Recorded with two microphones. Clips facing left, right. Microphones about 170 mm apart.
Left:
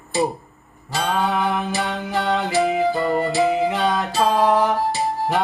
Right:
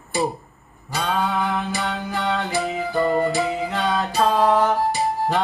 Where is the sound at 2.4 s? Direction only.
Centre (ahead or behind).